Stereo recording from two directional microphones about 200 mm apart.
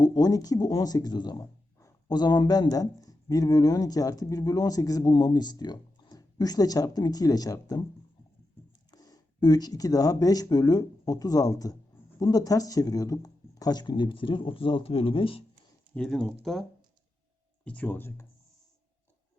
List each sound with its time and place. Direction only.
0.0 s speech: 20° left (ahead or behind)
8.9 s speech: 20° left (ahead or behind)
16.0 s speech: 5° left (ahead or behind)
17.7 s speech: 5° left (ahead or behind)